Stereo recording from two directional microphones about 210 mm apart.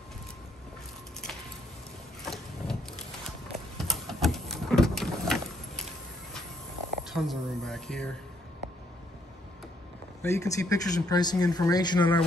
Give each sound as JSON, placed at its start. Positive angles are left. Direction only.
{"t": 2.2, "sound": "vehicle", "side_deg": 0}
{"t": 3.3, "sound": "a sound", "side_deg": 0}
{"t": 7.2, "sound": "speech", "side_deg": 0}
{"t": 10.2, "sound": "speech", "side_deg": 15}